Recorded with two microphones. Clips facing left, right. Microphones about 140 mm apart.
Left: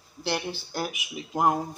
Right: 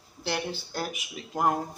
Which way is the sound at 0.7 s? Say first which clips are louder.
Left 2 dB; 10° left (ahead or behind).